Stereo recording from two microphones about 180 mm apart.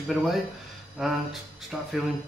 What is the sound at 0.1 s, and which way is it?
Speech, centre (ahead or behind).